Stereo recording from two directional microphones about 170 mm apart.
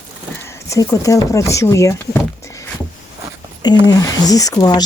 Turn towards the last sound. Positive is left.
turn(degrees=20)  # may be behind; listen again after turning